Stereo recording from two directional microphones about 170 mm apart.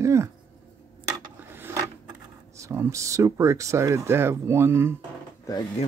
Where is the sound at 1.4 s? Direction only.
15° right (ahead or behind).